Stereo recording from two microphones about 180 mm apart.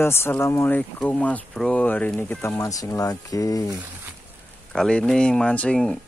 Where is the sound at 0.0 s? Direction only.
15° left (ahead or behind).